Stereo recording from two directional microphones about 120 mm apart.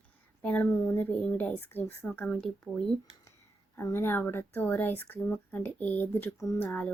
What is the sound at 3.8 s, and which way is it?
A woman's voice, 20° left (ahead or behind).